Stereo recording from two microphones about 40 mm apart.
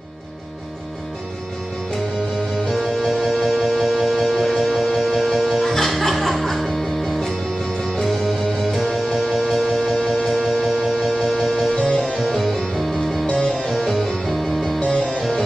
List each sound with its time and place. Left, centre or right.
3.0 s music: centre
13.3 s music: centre
14.0 s music: centre
14.9 s music: centre